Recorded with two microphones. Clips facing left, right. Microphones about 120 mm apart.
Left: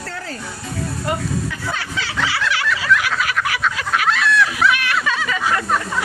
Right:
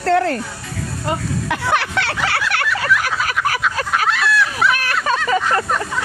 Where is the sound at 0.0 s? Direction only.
65° right (ahead or behind).